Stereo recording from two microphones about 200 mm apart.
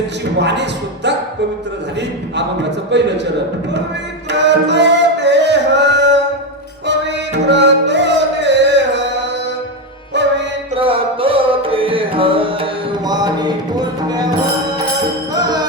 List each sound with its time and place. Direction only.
0.3 s speech: 60° right (ahead or behind)
2.9 s speech: 60° right (ahead or behind)
4.3 s music: 60° right (ahead or behind)
10.8 s music: 25° right (ahead or behind)